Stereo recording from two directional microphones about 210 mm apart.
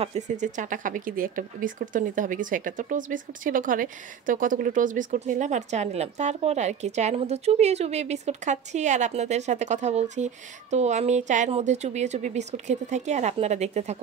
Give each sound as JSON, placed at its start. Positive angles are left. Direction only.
{"t": 0.0, "sound": "speech", "side_deg": -35}